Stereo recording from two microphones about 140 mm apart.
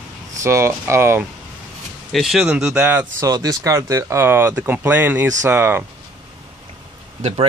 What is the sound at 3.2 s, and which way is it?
Speech, 25° right (ahead or behind).